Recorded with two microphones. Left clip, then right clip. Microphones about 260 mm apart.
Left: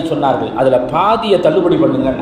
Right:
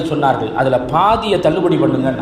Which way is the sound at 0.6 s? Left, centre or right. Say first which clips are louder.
Left 5 dB; right.